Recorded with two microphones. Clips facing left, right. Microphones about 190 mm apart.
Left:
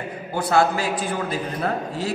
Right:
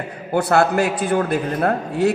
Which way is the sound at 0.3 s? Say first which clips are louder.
Right 3 dB; 60° right (ahead or behind).